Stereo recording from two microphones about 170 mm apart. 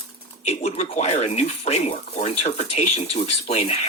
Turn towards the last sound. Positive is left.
turn(degrees=35)  # may be behind; listen again after turning